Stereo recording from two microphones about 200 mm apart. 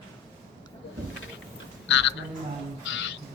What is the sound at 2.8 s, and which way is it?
Music, 70° left (ahead or behind).